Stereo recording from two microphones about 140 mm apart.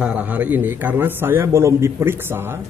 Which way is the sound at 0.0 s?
10° right (ahead or behind).